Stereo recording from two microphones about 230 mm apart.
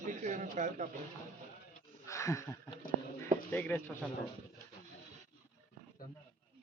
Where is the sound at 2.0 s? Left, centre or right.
Centre.